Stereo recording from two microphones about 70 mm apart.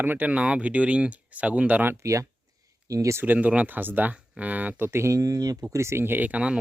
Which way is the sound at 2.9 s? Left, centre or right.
Right.